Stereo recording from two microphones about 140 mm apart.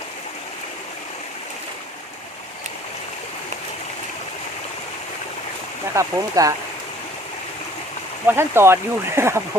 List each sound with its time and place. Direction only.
5.9 s speech: 25° right (ahead or behind)
8.3 s speech: 15° right (ahead or behind)